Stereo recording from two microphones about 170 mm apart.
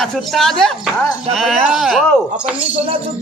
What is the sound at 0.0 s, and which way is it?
Speech, centre (ahead or behind).